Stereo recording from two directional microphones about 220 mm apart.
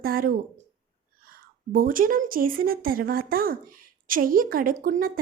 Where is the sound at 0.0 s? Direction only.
40° right (ahead or behind).